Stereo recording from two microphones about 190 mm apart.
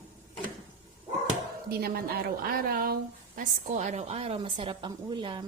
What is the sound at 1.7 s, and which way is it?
A woman's voice, 55° right (ahead or behind).